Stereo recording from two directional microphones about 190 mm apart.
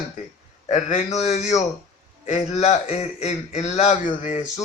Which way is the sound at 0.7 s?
35° left (ahead or behind).